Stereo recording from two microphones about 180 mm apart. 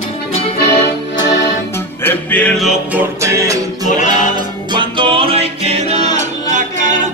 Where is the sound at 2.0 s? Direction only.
10° left (ahead or behind).